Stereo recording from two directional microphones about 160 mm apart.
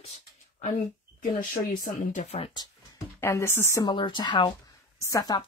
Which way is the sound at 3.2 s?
15° left (ahead or behind).